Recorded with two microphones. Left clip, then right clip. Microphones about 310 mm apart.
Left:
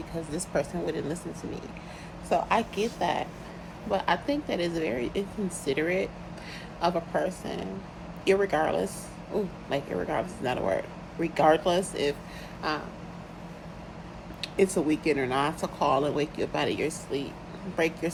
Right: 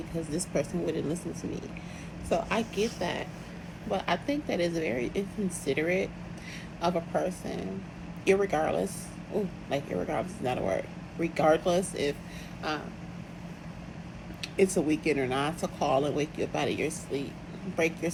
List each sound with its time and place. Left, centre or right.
0.5 s speech: centre
0.9 s speech: left
2.3 s speech: centre
14.4 s speech: centre